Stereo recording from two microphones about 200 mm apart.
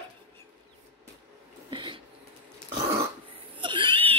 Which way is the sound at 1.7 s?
25° right (ahead or behind).